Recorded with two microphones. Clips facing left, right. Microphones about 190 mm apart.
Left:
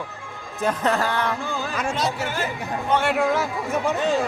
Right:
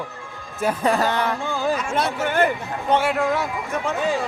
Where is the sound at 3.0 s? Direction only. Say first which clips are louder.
Even; centre (ahead or behind).